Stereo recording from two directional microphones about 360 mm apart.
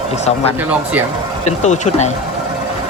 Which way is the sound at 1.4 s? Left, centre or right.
Centre.